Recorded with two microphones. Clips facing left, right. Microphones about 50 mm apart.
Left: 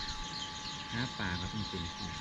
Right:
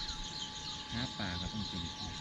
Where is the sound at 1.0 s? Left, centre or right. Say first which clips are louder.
Left 3 dB; centre.